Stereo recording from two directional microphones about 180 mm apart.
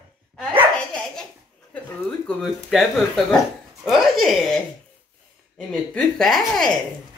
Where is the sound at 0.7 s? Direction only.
5° left (ahead or behind).